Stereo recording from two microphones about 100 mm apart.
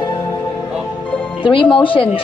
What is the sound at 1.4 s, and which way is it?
Speech, 60° left (ahead or behind).